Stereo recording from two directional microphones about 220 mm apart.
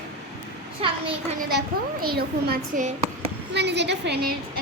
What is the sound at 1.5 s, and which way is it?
A child's voice, 45° right (ahead or behind).